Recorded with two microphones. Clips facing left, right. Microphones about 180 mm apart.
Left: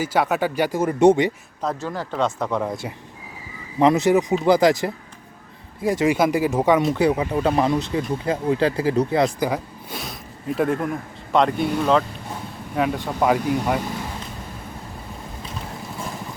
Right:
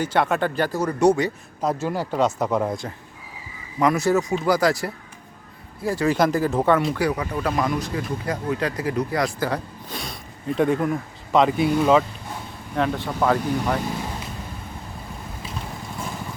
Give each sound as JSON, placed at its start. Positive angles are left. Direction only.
{"t": 0.0, "sound": "speech", "side_deg": 5}
{"t": 0.8, "sound": "speech", "side_deg": 25}
{"t": 1.6, "sound": "speech", "side_deg": -10}
{"t": 3.8, "sound": "speech", "side_deg": 25}
{"t": 6.9, "sound": "speech", "side_deg": 25}
{"t": 12.7, "sound": "speech", "side_deg": 5}